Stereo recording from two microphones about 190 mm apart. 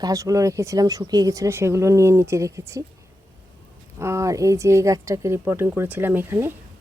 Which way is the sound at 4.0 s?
15° right (ahead or behind).